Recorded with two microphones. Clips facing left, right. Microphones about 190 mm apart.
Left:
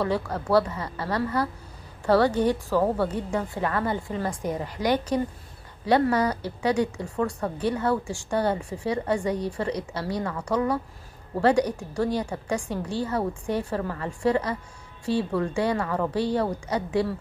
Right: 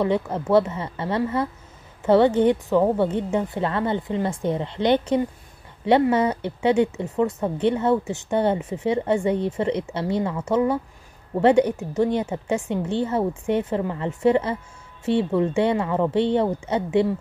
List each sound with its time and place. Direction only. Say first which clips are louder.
0.0 s speech: right 4 dB; 20° right (ahead or behind)